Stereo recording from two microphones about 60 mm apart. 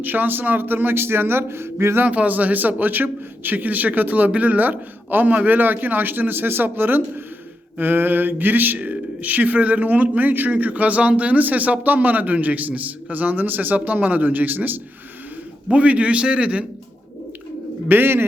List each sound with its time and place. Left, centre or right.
0.0 s speech: right
2.0 s speech: right
15.7 s speech: right
17.8 s speech: right